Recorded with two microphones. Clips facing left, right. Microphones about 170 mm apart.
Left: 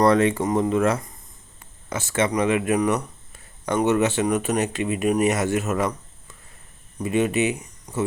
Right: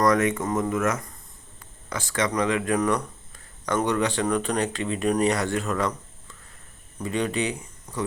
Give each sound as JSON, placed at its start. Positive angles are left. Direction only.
{"t": 0.0, "sound": "speech", "side_deg": 30}
{"t": 1.5, "sound": "a sound", "side_deg": 25}
{"t": 2.3, "sound": "speech", "side_deg": 20}
{"t": 7.0, "sound": "speech", "side_deg": 15}